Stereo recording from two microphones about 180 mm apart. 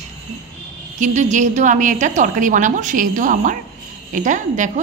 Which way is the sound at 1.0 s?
40° right (ahead or behind).